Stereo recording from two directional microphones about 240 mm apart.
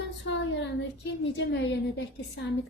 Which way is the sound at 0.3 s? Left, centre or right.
Left.